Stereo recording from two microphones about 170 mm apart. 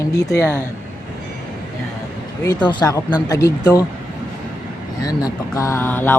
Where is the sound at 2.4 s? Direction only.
20° left (ahead or behind).